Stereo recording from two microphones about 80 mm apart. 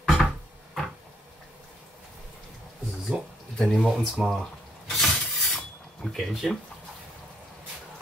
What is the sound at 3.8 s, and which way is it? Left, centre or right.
Speech, centre.